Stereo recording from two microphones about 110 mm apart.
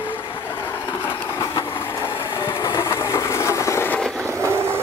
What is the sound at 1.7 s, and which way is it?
Vehicle, 20° left (ahead or behind).